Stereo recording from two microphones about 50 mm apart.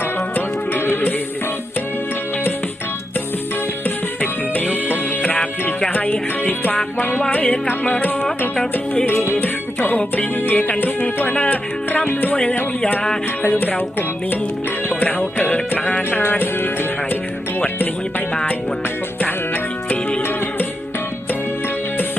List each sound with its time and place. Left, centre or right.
0.3 s music: left
3.8 s music: left
12.0 s music: left
13.4 s music: left
15.4 s music: left
16.2 s music: left